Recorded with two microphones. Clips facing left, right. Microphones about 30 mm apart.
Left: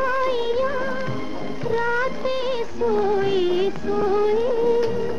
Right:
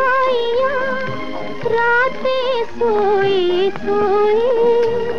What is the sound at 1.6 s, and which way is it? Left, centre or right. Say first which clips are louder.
Music of bollywood: right 8 dB; right.